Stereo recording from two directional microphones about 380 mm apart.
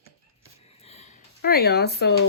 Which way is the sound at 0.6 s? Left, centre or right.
Centre.